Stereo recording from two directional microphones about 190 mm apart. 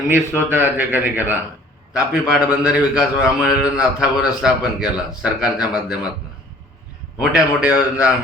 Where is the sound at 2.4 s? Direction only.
10° right (ahead or behind).